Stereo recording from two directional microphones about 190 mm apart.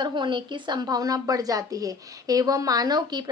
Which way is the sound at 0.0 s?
25° right (ahead or behind).